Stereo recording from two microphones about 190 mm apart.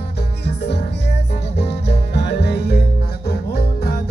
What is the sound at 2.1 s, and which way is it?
Music, 60° left (ahead or behind).